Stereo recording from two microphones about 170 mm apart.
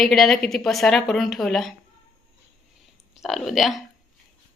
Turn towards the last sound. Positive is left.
turn(degrees=0)  # may be behind; listen again after turning